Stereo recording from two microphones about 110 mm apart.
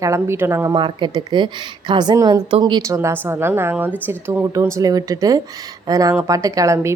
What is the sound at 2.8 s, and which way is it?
A woman's voice, 30° right (ahead or behind).